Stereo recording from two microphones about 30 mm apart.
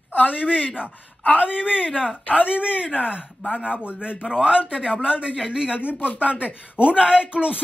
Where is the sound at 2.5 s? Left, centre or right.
Right.